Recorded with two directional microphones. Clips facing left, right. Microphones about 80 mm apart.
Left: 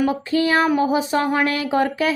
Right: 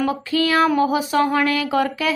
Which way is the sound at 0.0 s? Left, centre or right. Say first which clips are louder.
Left 1 dB; left.